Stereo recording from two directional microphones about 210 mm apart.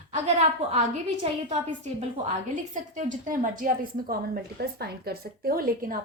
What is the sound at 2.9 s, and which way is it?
A woman's voice, 35° right (ahead or behind).